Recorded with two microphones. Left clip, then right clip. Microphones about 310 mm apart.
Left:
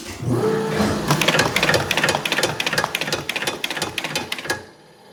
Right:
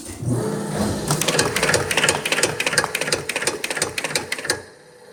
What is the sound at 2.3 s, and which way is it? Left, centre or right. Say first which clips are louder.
Sewing machine: right 1 dB; left.